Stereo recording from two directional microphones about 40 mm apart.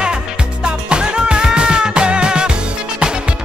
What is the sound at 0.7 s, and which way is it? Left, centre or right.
Music, right.